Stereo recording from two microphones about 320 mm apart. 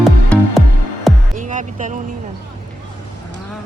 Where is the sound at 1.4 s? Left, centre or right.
Right.